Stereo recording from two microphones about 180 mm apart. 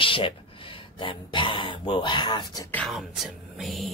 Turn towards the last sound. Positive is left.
turn(degrees=0)  # may be behind; listen again after turning